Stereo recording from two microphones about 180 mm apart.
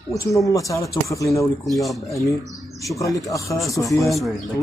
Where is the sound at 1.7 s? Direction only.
Centre (ahead or behind).